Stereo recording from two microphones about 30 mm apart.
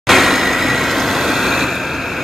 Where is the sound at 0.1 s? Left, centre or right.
Centre.